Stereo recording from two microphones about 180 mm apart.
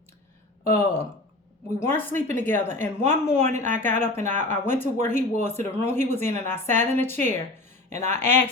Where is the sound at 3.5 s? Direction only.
40° right (ahead or behind).